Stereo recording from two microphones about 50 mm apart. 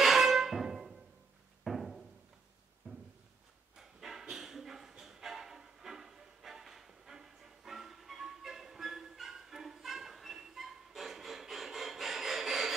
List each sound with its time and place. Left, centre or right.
0.0 s music: centre
2.8 s a sound: right
3.7 s dog: centre